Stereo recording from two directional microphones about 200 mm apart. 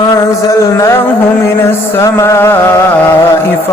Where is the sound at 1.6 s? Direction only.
15° left (ahead or behind).